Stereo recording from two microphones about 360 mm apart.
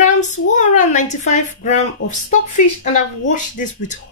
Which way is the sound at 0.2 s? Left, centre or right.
Left.